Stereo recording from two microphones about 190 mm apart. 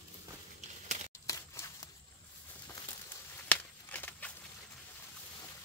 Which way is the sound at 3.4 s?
10° left (ahead or behind).